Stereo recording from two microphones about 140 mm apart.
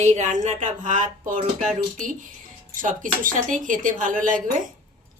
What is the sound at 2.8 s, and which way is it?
Speech, 75° right (ahead or behind).